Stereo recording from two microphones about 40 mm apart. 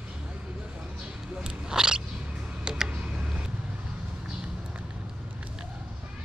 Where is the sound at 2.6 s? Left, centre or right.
Right.